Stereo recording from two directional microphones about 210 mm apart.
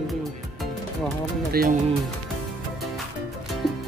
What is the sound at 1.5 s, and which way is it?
Speech, 45° right (ahead or behind).